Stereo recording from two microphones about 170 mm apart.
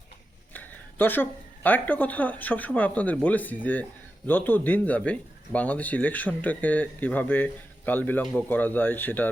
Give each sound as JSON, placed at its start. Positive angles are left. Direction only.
{"t": 0.5, "sound": "a woman's voice", "side_deg": 10}